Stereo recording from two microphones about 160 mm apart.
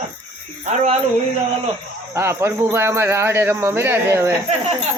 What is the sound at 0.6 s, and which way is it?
Speech, 45° right (ahead or behind).